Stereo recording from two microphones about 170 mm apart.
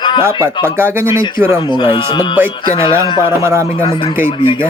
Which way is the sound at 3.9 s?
30° left (ahead or behind).